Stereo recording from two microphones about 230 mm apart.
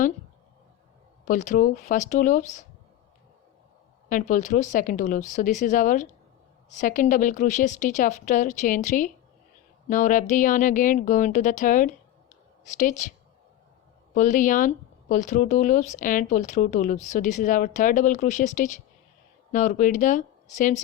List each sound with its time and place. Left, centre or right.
1.2 s speech: left
4.1 s speech: left
14.1 s speech: left